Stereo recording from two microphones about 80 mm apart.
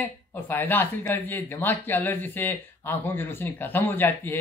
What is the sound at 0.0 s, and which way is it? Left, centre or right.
Speech, left.